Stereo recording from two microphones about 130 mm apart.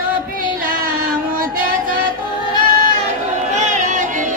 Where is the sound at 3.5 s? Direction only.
70° right (ahead or behind).